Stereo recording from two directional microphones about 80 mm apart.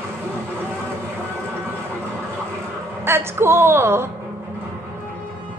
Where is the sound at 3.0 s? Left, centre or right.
Right.